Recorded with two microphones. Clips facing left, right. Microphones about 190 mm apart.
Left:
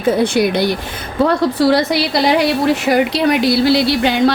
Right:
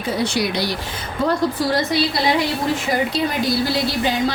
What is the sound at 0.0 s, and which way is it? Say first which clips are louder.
Speech: left 7 dB; 55° left (ahead or behind).